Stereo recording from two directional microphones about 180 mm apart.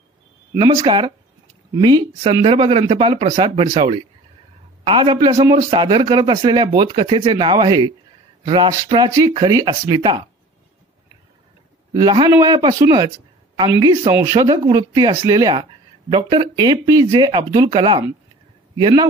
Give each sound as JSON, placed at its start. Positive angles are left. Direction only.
{"t": 0.6, "sound": "speech", "side_deg": -25}
{"t": 11.9, "sound": "speech", "side_deg": -25}